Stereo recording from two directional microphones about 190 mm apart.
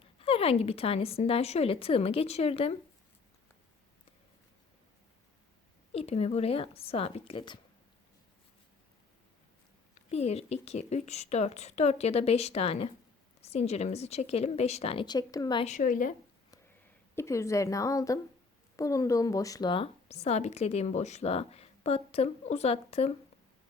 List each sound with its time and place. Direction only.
0.0 s a woman's voice: 30° left (ahead or behind)
5.9 s a woman's voice: 30° left (ahead or behind)
9.9 s a woman's voice: 35° left (ahead or behind)
15.6 s speech: 40° left (ahead or behind)
17.2 s a woman's voice: 15° left (ahead or behind); by 23.1 s 35° left (ahead or behind)